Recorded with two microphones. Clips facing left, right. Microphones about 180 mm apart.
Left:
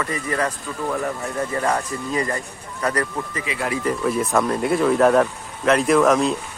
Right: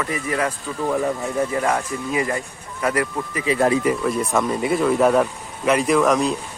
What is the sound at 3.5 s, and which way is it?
Speech, 35° right (ahead or behind).